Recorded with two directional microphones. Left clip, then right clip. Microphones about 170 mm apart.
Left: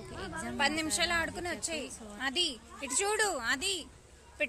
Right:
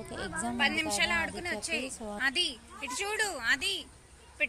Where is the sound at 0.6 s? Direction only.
30° left (ahead or behind).